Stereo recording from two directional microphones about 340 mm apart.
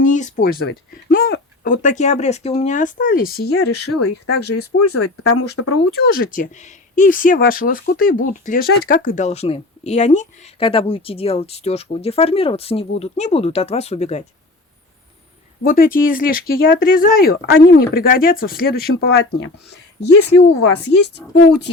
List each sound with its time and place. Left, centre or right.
0.0 s speech: left
4.8 s speech: left
6.1 s speech: left
15.6 s speech: left
21.2 s a woman's voice: centre